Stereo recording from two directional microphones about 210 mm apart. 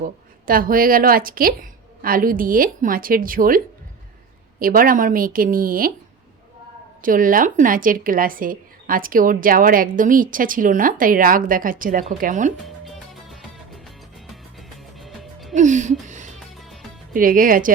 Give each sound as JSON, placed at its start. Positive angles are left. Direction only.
{"t": 0.0, "sound": "a woman's voice", "side_deg": -40}
{"t": 4.6, "sound": "a woman's voice", "side_deg": -40}
{"t": 7.0, "sound": "speech", "side_deg": -40}
{"t": 14.9, "sound": "music", "side_deg": 0}
{"t": 15.5, "sound": "music", "side_deg": -35}
{"t": 16.6, "sound": "music", "side_deg": 0}
{"t": 17.2, "sound": "speech", "side_deg": -40}